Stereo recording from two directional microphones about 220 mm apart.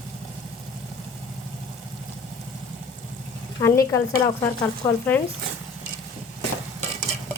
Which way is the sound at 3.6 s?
10° left (ahead or behind).